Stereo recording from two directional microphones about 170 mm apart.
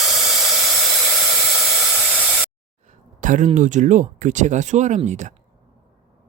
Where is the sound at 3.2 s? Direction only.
45° right (ahead or behind).